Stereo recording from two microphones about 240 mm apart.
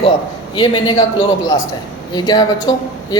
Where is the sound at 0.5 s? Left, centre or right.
Centre.